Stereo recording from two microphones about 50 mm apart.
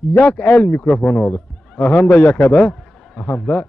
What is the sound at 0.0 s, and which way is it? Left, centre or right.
A man's voice, left.